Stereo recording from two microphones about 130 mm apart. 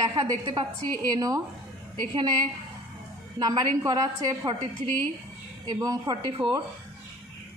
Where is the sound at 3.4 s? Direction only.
30° right (ahead or behind).